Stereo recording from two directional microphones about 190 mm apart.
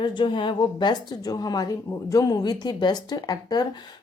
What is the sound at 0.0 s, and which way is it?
A woman's voice, 25° left (ahead or behind).